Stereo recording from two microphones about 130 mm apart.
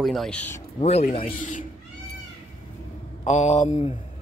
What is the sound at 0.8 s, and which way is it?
Speech, 60° left (ahead or behind).